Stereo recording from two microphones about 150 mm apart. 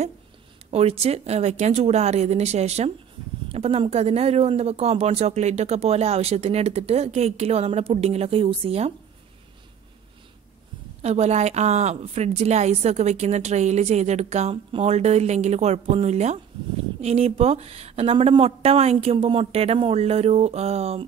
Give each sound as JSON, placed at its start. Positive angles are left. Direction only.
{"t": 0.7, "sound": "speech", "side_deg": -45}
{"t": 11.0, "sound": "speech", "side_deg": -45}